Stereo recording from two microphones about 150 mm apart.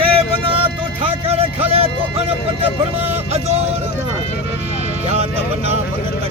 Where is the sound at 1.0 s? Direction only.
40° right (ahead or behind).